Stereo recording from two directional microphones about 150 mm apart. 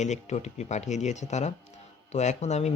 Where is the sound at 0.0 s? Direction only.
50° left (ahead or behind).